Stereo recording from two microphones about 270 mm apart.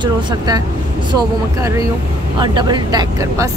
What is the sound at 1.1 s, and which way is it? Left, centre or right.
Speech, centre.